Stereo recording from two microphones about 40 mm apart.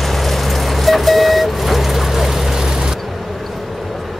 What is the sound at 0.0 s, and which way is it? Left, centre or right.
Vehicle, centre.